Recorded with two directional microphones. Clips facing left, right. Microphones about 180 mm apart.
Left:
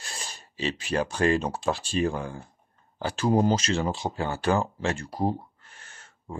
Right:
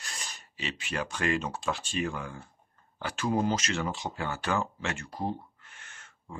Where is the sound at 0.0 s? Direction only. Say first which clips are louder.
Left 3 dB; 30° left (ahead or behind).